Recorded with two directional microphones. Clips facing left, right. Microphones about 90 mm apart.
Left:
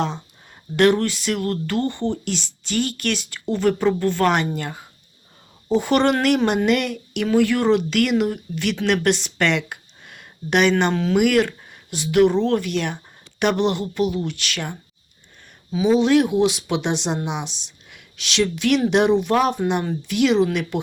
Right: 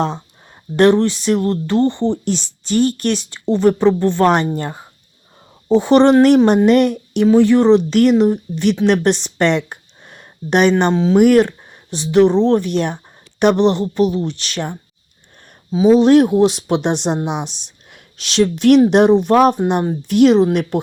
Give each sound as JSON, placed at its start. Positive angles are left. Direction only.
{"t": 0.8, "sound": "speech", "side_deg": -30}
{"t": 10.9, "sound": "speech", "side_deg": -20}
{"t": 11.2, "sound": "speech", "side_deg": -35}
{"t": 15.7, "sound": "speech", "side_deg": -35}